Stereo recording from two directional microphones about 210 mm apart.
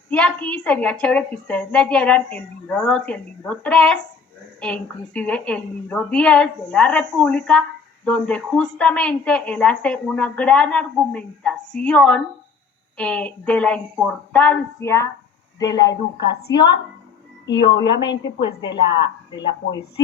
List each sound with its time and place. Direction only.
0.1 s a woman's voice: 5° left (ahead or behind)
17.4 s a woman's voice: 55° left (ahead or behind)